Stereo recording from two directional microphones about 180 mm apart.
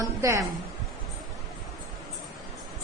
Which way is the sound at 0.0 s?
15° right (ahead or behind).